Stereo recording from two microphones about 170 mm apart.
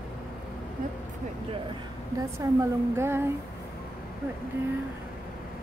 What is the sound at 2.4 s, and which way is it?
Speech, 20° right (ahead or behind).